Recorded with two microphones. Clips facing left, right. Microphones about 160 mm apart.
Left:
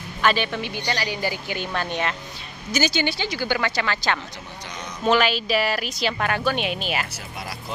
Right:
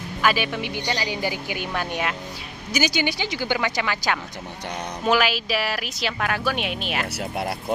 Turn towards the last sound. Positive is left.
turn(degrees=-65)  # may be behind; listen again after turning